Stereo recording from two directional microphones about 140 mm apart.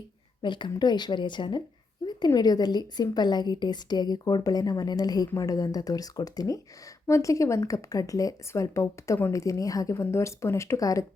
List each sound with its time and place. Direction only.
0.4 s a woman's voice: 35° left (ahead or behind)